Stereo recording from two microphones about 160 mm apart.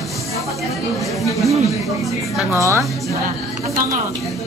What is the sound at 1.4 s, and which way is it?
A woman's voice, centre (ahead or behind).